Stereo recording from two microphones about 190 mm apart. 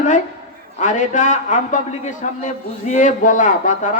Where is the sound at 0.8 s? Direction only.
40° left (ahead or behind).